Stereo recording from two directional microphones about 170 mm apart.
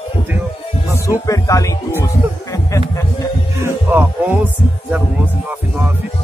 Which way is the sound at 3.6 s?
15° right (ahead or behind).